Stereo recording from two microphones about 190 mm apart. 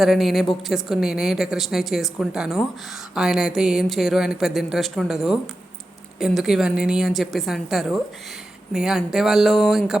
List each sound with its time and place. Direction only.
0.0 s a woman's voice: centre (ahead or behind)